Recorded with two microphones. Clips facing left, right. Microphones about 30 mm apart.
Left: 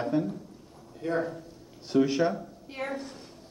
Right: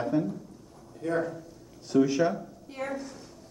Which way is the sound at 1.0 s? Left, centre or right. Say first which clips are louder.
Even; centre.